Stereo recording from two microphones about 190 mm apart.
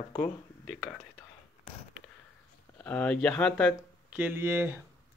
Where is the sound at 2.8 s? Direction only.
5° left (ahead or behind).